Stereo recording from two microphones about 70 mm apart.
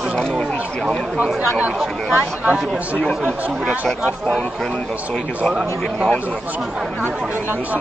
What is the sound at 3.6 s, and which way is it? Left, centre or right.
Speech, centre.